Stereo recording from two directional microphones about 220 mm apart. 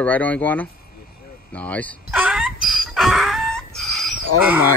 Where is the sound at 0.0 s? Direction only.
5° left (ahead or behind).